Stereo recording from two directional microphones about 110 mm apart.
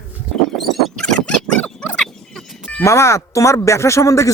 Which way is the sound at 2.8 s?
25° left (ahead or behind).